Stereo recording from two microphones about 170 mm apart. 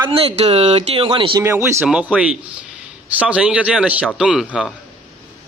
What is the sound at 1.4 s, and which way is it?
A man's voice, 15° right (ahead or behind).